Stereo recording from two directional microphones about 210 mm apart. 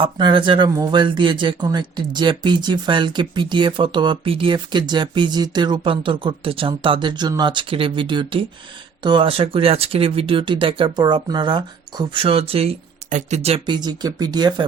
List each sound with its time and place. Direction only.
0.0 s speech: 20° right (ahead or behind)